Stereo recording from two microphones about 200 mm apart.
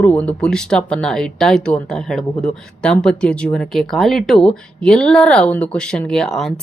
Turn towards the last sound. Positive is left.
turn(degrees=0)  # may be behind; listen again after turning